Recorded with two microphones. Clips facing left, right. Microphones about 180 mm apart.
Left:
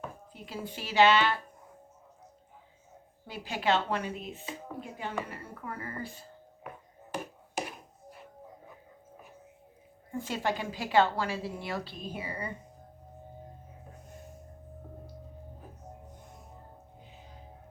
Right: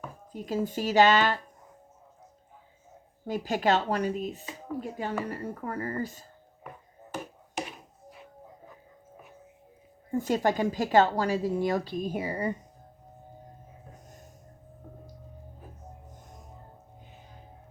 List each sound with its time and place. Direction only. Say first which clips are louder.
0.3 s a woman's voice: right 12 dB; 45° right (ahead or behind)
3.2 s speech: right 4 dB; 45° right (ahead or behind)
7.5 s a sound: right 1 dB; centre (ahead or behind)
10.1 s a woman's voice: right 6 dB; 45° right (ahead or behind)